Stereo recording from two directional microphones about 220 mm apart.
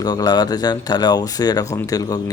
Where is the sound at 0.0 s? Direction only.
20° left (ahead or behind).